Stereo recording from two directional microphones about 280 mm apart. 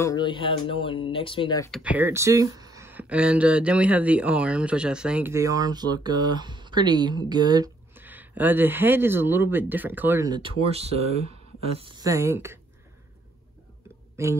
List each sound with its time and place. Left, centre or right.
0.0 s speech: centre
1.7 s speech: centre
14.2 s speech: centre